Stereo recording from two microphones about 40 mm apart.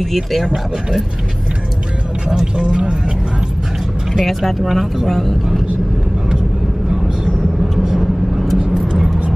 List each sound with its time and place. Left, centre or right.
0.0 s speech: centre
2.2 s speech: right
4.1 s speech: centre
5.0 s speech: centre
7.8 s vehicle: centre